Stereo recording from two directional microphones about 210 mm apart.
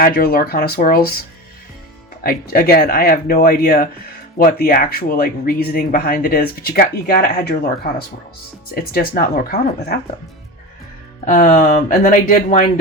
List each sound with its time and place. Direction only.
0.0 s speech: 45° left (ahead or behind)
2.2 s speech: 45° left (ahead or behind)
8.7 s speech: 45° left (ahead or behind)
11.3 s speech: 40° left (ahead or behind)